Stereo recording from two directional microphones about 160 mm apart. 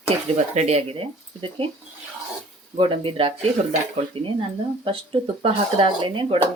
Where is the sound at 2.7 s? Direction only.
35° right (ahead or behind).